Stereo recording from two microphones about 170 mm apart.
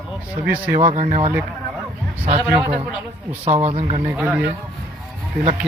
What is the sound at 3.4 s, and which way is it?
Speech, 40° right (ahead or behind).